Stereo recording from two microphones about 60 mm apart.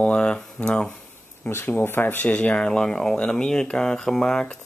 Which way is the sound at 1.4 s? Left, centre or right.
Left.